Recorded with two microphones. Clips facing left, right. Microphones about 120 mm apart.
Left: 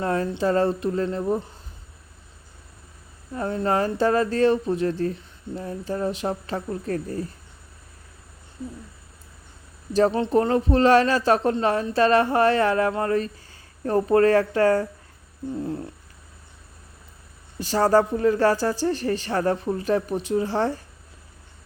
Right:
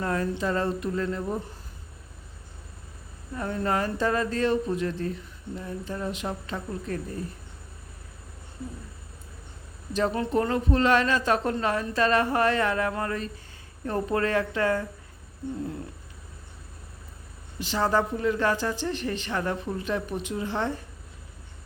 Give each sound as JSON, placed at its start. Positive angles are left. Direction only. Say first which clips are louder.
{"t": 0.0, "sound": "a woman's voice", "louder": "left 4 dB", "side_deg": 30}
{"t": 3.3, "sound": "a woman's voice", "louder": "left 4 dB", "side_deg": 30}
{"t": 9.9, "sound": "a woman's voice", "louder": "left 6 dB", "side_deg": 30}
{"t": 17.6, "sound": "a woman's voice", "louder": "left 6 dB", "side_deg": 40}